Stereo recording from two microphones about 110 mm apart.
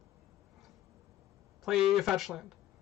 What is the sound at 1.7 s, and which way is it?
Speech, centre (ahead or behind).